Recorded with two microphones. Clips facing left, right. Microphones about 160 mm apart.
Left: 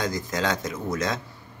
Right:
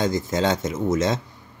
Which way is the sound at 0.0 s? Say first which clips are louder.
Right 5 dB; 25° right (ahead or behind).